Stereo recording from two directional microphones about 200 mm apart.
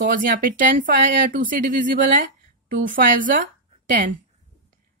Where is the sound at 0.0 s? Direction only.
45° right (ahead or behind).